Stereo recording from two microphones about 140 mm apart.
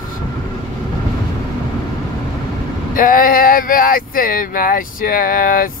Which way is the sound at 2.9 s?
80° left.